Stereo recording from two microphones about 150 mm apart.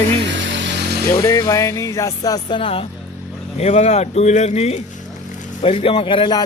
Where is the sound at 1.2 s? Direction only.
20° left (ahead or behind).